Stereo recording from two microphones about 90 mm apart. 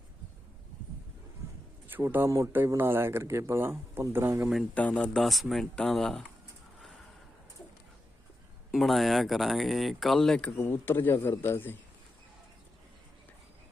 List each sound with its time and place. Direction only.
1.9 s a man's voice: 25° right (ahead or behind)
4.7 s speech: 15° left (ahead or behind)
5.1 s speech: centre (ahead or behind)
8.7 s speech: centre (ahead or behind)
10.6 s a man's voice: 25° left (ahead or behind)